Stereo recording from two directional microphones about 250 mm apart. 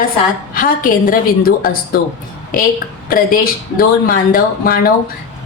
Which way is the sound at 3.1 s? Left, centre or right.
Left.